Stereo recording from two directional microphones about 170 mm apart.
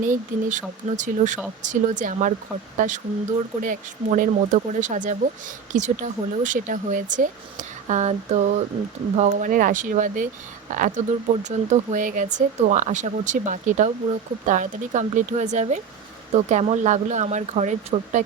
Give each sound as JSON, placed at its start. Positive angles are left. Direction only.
{"t": 0.0, "sound": "speech", "side_deg": -50}